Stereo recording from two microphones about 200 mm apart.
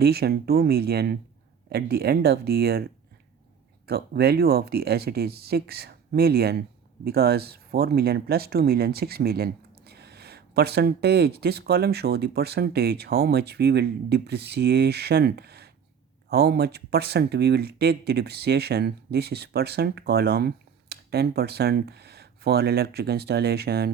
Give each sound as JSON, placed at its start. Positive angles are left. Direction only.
{"t": 0.0, "sound": "speech", "side_deg": -50}
{"t": 3.8, "sound": "speech", "side_deg": -50}